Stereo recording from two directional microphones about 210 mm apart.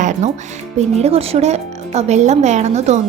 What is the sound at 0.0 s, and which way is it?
A woman's voice, 35° right (ahead or behind).